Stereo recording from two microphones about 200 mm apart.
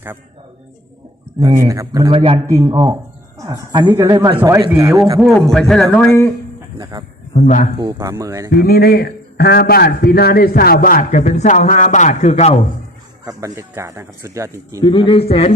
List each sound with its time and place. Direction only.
1.6 s speech: 15° right (ahead or behind)
2.5 s speech: 15° right (ahead or behind)
5.2 s a man's voice: centre (ahead or behind)
6.9 s a man's voice: 20° right (ahead or behind)
7.3 s a man's voice: 35° left (ahead or behind)
7.8 s speech: 15° right (ahead or behind)
8.6 s a man's voice: 50° left (ahead or behind); by 12.5 s 30° left (ahead or behind)
13.2 s speech: 15° right (ahead or behind)
14.8 s speech: 20° left (ahead or behind)